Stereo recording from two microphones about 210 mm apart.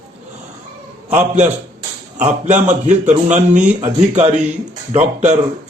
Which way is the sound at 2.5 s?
35° right (ahead or behind).